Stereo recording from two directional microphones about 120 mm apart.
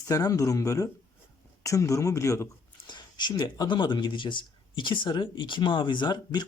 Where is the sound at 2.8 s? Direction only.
35° left (ahead or behind).